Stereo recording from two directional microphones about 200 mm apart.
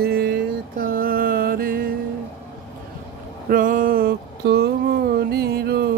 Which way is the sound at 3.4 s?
45° right (ahead or behind).